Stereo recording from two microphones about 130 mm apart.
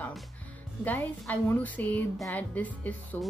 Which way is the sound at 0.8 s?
15° left (ahead or behind).